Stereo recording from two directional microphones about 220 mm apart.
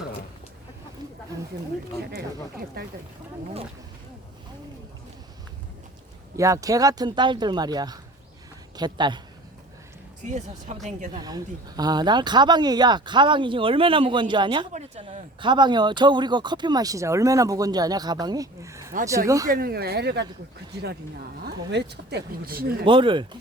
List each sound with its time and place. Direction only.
2.0 s speech: 45° right (ahead or behind)
6.3 s a woman's voice: 15° right (ahead or behind)
10.2 s speech: 30° right (ahead or behind)
11.2 s speech: 15° right (ahead or behind)
19.5 s speech: 45° right (ahead or behind)
21.7 s speech: 50° right (ahead or behind)
22.9 s speech: 20° right (ahead or behind)